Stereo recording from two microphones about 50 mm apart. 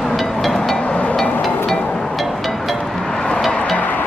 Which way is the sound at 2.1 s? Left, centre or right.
Centre.